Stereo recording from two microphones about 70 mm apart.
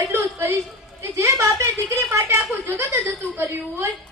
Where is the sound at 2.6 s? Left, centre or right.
Right.